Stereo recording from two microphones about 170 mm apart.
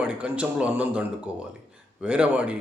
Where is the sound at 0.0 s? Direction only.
10° right (ahead or behind).